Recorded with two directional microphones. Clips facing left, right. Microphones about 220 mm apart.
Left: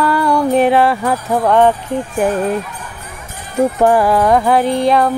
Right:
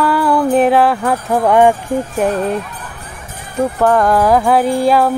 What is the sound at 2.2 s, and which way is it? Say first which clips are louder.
Jingle bell: left 2 dB; 5° left (ahead or behind).